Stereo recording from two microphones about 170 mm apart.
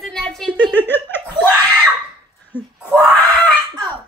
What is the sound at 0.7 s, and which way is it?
Laughter, 10° left (ahead or behind).